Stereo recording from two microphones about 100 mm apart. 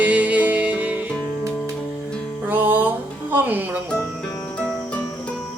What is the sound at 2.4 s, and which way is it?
Music, 20° right (ahead or behind).